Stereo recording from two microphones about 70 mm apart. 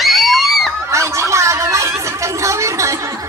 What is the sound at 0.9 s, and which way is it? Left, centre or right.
Chatter, right.